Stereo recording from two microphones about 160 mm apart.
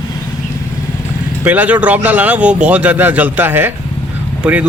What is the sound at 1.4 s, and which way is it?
A man's voice, 10° right (ahead or behind).